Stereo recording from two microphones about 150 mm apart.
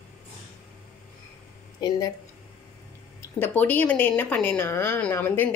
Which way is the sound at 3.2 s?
10° left (ahead or behind).